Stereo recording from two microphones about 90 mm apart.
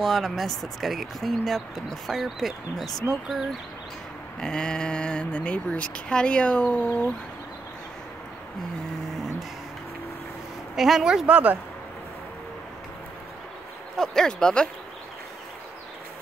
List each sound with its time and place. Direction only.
0.0 s speech: centre (ahead or behind)
4.4 s speech: 10° left (ahead or behind)
10.8 s speech: 5° right (ahead or behind)
11.2 s speech: 15° right (ahead or behind)
13.9 s speech: 5° left (ahead or behind)